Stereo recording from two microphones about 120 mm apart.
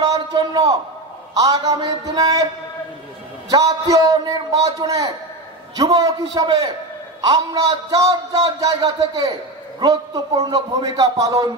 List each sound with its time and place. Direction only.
0.0 s a sound: 35° right (ahead or behind)
1.3 s speech: 30° right (ahead or behind)
3.4 s a man's voice: 30° right (ahead or behind)